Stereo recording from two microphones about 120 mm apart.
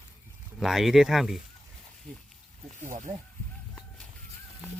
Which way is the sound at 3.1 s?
20° right (ahead or behind).